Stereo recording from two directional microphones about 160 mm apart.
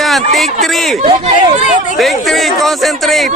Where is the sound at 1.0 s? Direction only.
40° right (ahead or behind).